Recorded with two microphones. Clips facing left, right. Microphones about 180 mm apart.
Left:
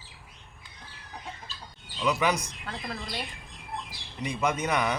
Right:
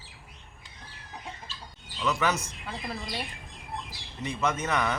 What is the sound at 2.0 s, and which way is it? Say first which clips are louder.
Speech: left 2 dB; 15° left (ahead or behind).